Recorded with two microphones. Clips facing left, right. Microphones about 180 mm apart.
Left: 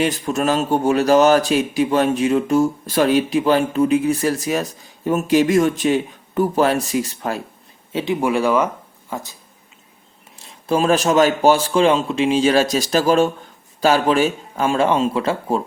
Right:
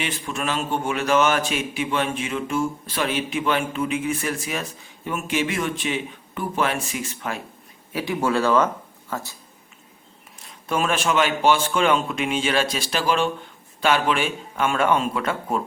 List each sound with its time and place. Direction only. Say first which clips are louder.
0.0 s a man's voice: left 9 dB; 40° left (ahead or behind)
7.9 s speech: left 3 dB; 20° left (ahead or behind)
10.3 s a man's voice: left 6 dB; 30° left (ahead or behind)